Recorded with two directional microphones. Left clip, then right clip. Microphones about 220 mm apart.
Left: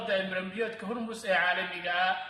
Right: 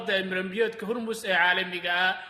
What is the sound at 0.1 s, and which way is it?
A man's voice, 45° right (ahead or behind).